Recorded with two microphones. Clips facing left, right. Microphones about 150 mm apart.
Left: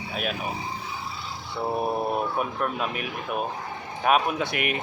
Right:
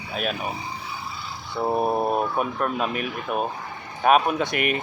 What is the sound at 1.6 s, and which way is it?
Speech, 25° right (ahead or behind).